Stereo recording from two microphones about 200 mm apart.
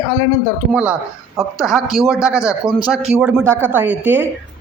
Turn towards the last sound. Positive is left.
turn(degrees=-10)  # may be behind; listen again after turning